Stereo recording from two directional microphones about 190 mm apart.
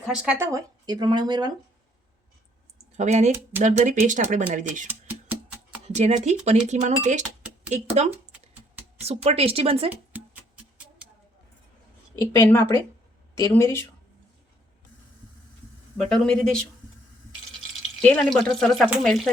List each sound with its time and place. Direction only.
0.1 s speech: 5° right (ahead or behind)
3.0 s speech: 40° right (ahead or behind)
4.9 s music: 10° right (ahead or behind)
5.9 s speech: 35° right (ahead or behind)
8.1 s a sound: 10° right (ahead or behind)
9.0 s speech: 30° right (ahead or behind)
10.1 s music: 10° right (ahead or behind)
12.4 s speech: 15° left (ahead or behind)
16.0 s speech: 5° left (ahead or behind)
18.0 s speech: 5° left (ahead or behind)